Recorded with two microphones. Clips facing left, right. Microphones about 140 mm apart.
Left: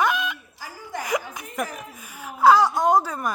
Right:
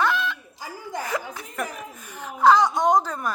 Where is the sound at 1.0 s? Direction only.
15° left (ahead or behind).